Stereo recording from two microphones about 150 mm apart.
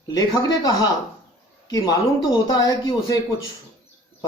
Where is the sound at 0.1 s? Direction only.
25° left (ahead or behind).